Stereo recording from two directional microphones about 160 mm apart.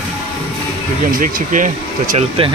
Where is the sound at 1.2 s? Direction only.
55° right (ahead or behind).